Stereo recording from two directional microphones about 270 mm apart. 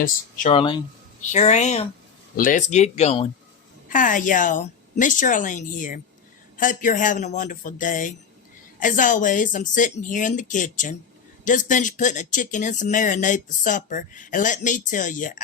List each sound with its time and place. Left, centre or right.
0.0 s speech: left